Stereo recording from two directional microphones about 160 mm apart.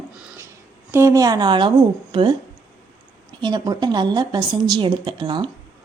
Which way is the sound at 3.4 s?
25° right (ahead or behind).